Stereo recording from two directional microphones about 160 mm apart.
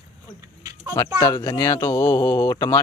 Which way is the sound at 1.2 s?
20° left (ahead or behind).